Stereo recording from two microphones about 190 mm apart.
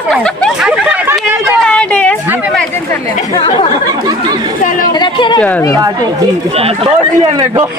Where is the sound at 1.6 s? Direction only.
5° left (ahead or behind).